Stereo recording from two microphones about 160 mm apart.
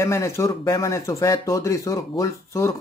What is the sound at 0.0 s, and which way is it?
Speech, 15° left (ahead or behind).